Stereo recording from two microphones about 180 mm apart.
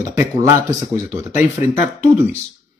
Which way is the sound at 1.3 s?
40° left (ahead or behind).